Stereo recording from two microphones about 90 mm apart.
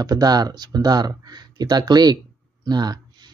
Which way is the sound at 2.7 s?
50° right (ahead or behind).